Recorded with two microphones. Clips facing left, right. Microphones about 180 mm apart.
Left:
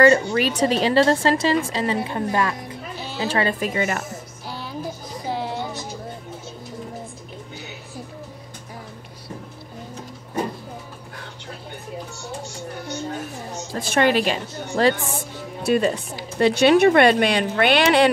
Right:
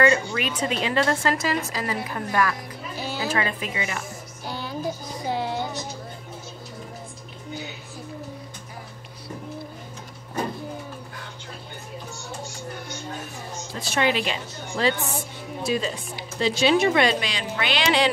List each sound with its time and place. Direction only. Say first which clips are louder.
0.0 s a woman's voice: left 5 dB; 40° left (ahead or behind)
4.5 s music: right 2 dB; centre (ahead or behind)
13.7 s a woman's voice: left 5 dB; 50° left (ahead or behind)
15.6 s speech: left 7 dB; 60° left (ahead or behind)